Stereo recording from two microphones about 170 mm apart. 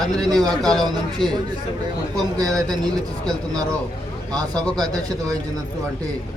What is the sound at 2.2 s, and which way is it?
Speech, 20° right (ahead or behind).